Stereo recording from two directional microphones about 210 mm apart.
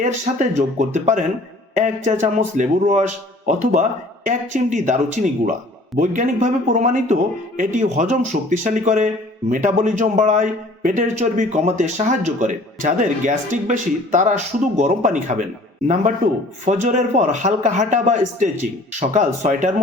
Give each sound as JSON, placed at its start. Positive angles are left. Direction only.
{"t": 0.0, "sound": "a man's voice", "side_deg": -35}
{"t": 16.6, "sound": "a man's voice", "side_deg": -35}